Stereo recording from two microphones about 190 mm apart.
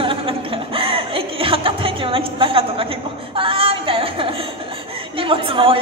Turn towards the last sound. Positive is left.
turn(degrees=-30)  # may be behind; listen again after turning